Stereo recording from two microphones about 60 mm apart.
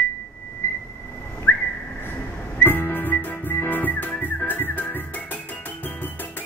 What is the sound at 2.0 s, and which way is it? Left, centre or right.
Music, left.